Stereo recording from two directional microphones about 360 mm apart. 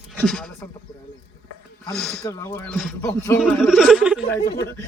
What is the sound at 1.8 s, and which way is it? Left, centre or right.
Speech, centre.